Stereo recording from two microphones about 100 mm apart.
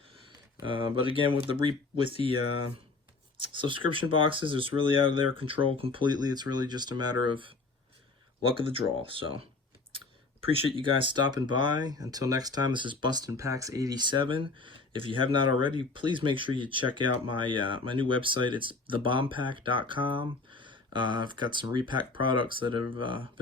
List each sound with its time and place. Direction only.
0.6 s speech: 60° right (ahead or behind)
3.5 s speech: 60° right (ahead or behind)
10.4 s speech: 65° right (ahead or behind)